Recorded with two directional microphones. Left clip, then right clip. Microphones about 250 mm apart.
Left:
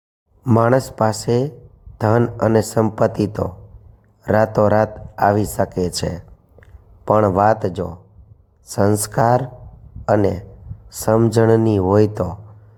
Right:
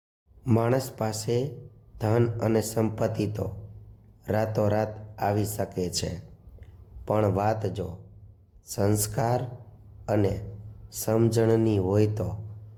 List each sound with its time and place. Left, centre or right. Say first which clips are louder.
0.4 s a man's voice: left 10 dB; centre